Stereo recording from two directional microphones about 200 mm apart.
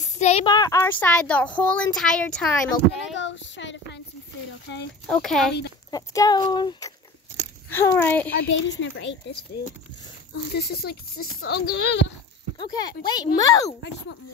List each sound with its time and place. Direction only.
0.2 s a sound: 35° left (ahead or behind)
0.5 s speech: 15° left (ahead or behind); by 3.2 s centre (ahead or behind)
3.2 s a sound: 65° left (ahead or behind)
5.0 s speech: centre (ahead or behind)
5.9 s speech: 20° left (ahead or behind)
7.7 s speech: 10° left (ahead or behind)
8.5 s speech: 65° left (ahead or behind)
10.3 s speech: 55° left (ahead or behind)
12.5 s speech: 20° left (ahead or behind)